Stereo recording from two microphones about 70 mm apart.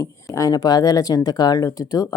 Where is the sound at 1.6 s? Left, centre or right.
Left.